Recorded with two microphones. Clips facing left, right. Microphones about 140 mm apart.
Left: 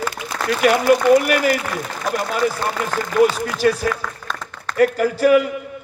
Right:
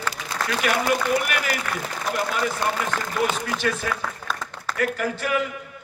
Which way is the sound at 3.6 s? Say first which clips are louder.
Left 9 dB; 35° left (ahead or behind).